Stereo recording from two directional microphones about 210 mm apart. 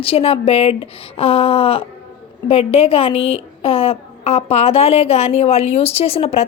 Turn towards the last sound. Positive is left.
turn(degrees=30)  # may be behind; listen again after turning